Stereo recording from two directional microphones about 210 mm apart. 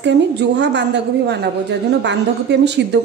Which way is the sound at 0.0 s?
55° right (ahead or behind).